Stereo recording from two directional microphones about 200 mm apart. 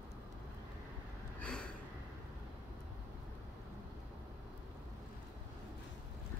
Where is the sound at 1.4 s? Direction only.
5° left (ahead or behind).